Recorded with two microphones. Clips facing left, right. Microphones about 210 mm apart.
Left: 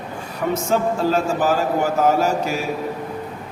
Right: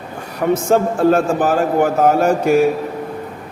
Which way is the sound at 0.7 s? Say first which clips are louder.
Right 6 dB; 55° right (ahead or behind).